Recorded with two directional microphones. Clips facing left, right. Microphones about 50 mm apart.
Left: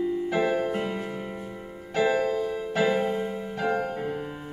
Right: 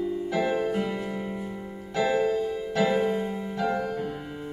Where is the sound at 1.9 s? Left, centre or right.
Left.